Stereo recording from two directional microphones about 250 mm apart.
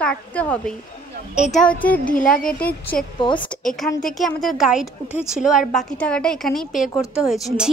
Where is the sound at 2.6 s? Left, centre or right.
Centre.